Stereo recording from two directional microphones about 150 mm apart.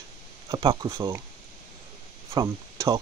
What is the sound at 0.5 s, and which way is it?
Speech, 35° right (ahead or behind).